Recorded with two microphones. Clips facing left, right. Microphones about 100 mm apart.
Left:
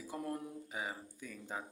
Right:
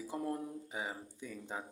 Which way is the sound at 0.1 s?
20° right (ahead or behind).